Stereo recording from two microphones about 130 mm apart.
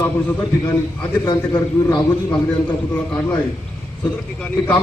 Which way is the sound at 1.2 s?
35° left (ahead or behind).